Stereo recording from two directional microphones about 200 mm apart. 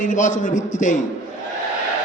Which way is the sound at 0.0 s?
40° left (ahead or behind).